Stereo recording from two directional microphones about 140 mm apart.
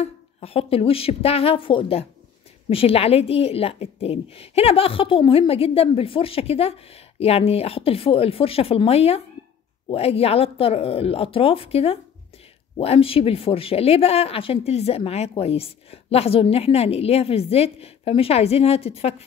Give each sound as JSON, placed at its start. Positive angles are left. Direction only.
{"t": 0.0, "sound": "speech", "side_deg": 45}